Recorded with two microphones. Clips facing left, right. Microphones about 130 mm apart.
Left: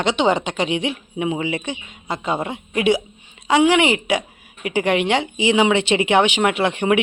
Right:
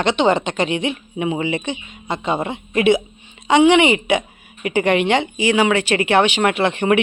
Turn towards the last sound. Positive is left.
turn(degrees=10)  # may be behind; listen again after turning